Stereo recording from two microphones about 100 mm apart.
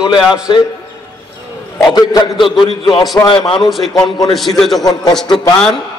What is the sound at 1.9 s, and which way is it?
A man's voice, 40° left (ahead or behind).